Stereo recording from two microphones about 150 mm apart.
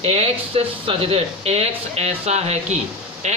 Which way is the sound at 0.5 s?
40° right (ahead or behind).